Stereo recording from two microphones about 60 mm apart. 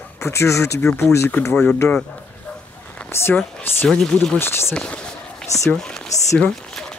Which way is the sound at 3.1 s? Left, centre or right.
Left.